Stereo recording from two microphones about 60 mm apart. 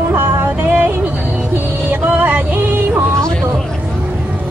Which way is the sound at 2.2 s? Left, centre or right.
Right.